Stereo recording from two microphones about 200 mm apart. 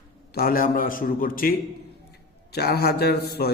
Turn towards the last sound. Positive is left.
turn(degrees=50)  # may be behind; listen again after turning